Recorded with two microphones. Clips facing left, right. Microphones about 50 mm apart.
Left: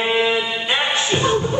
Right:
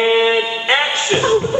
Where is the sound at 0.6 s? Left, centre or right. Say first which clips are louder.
Right 4 dB; right.